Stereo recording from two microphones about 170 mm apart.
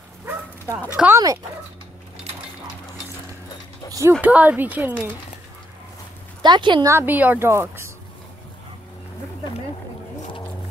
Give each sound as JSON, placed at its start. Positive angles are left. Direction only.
{"t": 0.2, "sound": "bow-wow", "side_deg": -10}
{"t": 0.9, "sound": "speech", "side_deg": -15}
{"t": 4.2, "sound": "speech", "side_deg": -10}
{"t": 6.4, "sound": "speech", "side_deg": -25}
{"t": 6.9, "sound": "speech", "side_deg": -10}